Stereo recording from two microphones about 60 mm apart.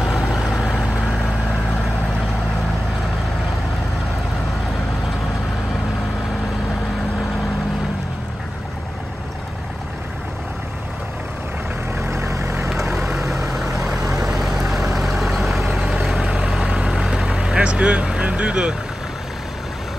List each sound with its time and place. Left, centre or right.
0.0 s vehicle: centre
12.1 s vehicle: right
12.9 s vehicle: centre
16.3 s vehicle: centre